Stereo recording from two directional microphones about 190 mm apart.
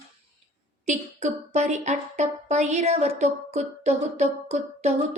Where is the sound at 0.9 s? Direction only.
40° right (ahead or behind).